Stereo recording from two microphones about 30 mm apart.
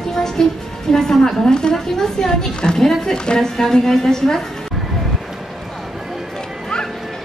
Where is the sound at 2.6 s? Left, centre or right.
Left.